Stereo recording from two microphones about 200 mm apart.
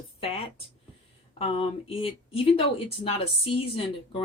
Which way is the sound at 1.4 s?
30° left (ahead or behind).